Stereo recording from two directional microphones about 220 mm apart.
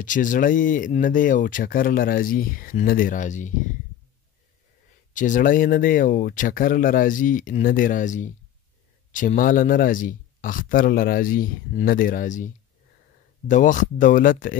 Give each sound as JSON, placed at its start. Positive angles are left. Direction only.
{"t": 0.0, "sound": "speech", "side_deg": 35}
{"t": 5.1, "sound": "speech", "side_deg": 35}
{"t": 13.5, "sound": "speech", "side_deg": 35}